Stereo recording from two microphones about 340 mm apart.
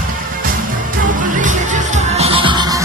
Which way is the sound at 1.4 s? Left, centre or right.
Right.